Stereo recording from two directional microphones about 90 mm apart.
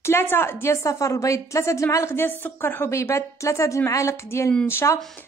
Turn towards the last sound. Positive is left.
turn(degrees=30)  # may be behind; listen again after turning